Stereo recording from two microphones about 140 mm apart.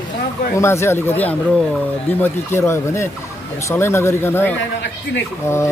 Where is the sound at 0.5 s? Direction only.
20° left (ahead or behind).